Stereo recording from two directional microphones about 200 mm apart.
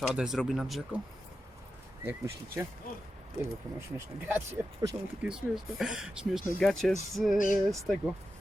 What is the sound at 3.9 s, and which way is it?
Speech, 10° right (ahead or behind).